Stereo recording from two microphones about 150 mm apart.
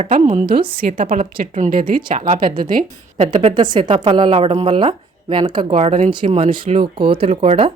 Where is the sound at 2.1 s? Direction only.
55° right (ahead or behind).